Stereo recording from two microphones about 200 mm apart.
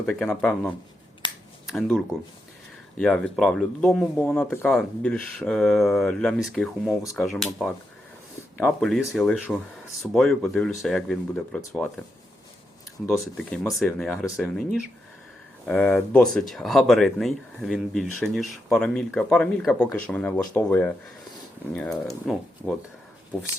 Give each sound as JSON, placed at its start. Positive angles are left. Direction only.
{"t": 0.0, "sound": "speech", "side_deg": 5}
{"t": 1.2, "sound": "finger snapping", "side_deg": 20}
{"t": 1.6, "sound": "speech", "side_deg": 0}
{"t": 13.1, "sound": "speech", "side_deg": 0}
{"t": 15.6, "sound": "speech", "side_deg": 5}